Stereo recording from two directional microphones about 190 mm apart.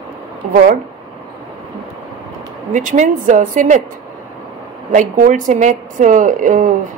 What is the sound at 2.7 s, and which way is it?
Speech, 40° right (ahead or behind).